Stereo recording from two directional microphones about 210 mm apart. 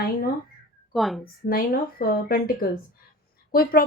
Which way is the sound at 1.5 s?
45° left (ahead or behind).